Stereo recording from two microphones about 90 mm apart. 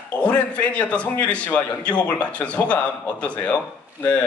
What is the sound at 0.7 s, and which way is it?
A man's voice, 15° left (ahead or behind).